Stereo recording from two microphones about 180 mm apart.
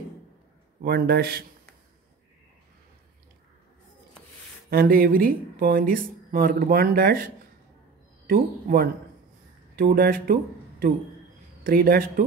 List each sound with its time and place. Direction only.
0.8 s a man's voice: 60° right (ahead or behind)
4.6 s speech: 55° right (ahead or behind)
8.3 s speech: 55° right (ahead or behind)